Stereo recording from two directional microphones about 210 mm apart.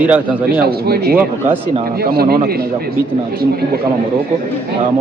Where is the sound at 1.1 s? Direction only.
10° right (ahead or behind).